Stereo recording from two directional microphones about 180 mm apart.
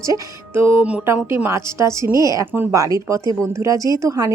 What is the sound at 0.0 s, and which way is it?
Speech, 15° right (ahead or behind).